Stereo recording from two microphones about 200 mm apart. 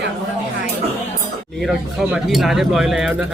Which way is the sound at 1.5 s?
Centre (ahead or behind).